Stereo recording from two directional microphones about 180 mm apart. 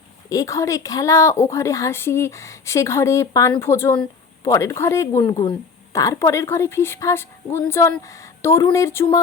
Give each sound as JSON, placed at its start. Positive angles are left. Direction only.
{"t": 0.3, "sound": "speech", "side_deg": 20}